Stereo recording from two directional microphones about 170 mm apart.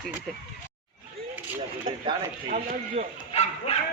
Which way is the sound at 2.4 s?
50° right (ahead or behind).